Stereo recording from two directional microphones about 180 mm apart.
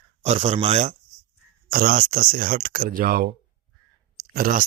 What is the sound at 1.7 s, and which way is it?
Speech, 50° right (ahead or behind).